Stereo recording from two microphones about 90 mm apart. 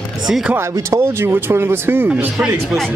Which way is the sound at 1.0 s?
30° right (ahead or behind).